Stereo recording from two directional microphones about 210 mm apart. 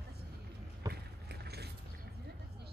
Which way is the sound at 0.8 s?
15° right (ahead or behind).